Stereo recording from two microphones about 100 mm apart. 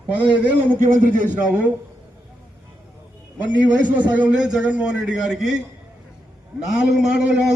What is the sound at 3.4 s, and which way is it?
A man's voice, 15° right (ahead or behind).